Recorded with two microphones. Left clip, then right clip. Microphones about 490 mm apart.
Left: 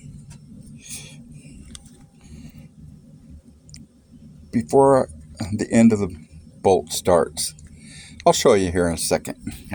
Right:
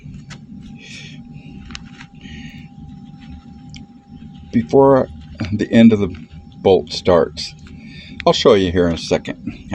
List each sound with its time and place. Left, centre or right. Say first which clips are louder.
4.5 s speech: right 4 dB; left